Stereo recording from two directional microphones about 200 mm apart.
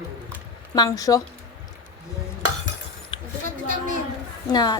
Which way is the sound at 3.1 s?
25° left (ahead or behind).